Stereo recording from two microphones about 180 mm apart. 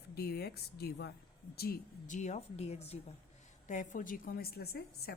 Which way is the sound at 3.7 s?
45° left (ahead or behind).